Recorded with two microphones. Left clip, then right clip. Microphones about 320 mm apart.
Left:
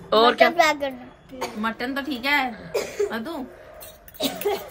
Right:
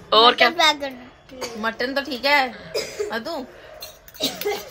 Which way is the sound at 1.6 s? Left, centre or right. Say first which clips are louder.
Right 4 dB; right.